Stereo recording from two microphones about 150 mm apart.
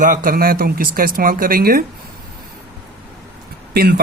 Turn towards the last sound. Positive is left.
turn(degrees=-90)